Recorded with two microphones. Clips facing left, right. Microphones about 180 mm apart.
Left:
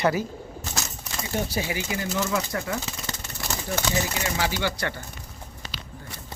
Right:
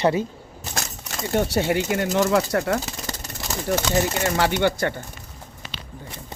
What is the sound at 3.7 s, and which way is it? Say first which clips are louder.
Speech: right 6 dB; 50° right (ahead or behind).